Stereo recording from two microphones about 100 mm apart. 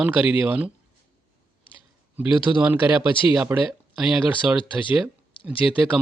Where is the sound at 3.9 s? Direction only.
5° right (ahead or behind).